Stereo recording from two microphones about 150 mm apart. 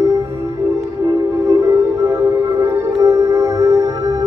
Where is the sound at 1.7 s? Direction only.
20° right (ahead or behind).